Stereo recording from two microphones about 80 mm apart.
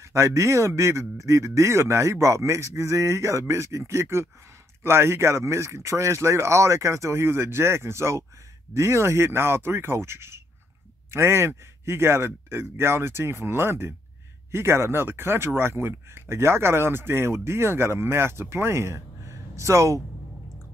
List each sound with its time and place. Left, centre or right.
0.0 s speech: right